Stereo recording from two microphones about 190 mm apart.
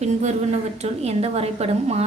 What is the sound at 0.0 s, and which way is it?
A woman's voice, 35° right (ahead or behind).